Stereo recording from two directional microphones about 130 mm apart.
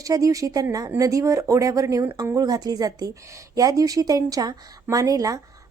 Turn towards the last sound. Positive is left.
turn(degrees=-25)  # may be behind; listen again after turning